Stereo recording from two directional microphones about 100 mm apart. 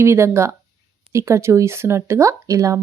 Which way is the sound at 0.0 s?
25° right (ahead or behind).